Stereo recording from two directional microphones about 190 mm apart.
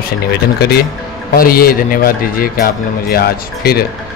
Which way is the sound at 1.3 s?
50° left (ahead or behind).